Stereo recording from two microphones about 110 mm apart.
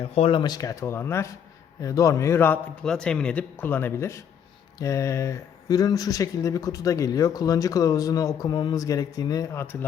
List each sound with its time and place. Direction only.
0.0 s a man's voice: 65° left (ahead or behind); by 2.6 s 20° left (ahead or behind)
2.8 s speech: 5° left (ahead or behind); by 9.7 s 25° left (ahead or behind)